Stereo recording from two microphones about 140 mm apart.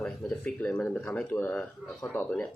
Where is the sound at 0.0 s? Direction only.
10° left (ahead or behind).